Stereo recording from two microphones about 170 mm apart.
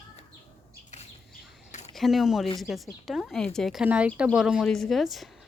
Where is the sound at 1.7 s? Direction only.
45° left (ahead or behind).